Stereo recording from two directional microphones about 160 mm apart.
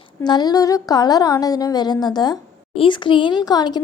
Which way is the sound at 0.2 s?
25° left (ahead or behind).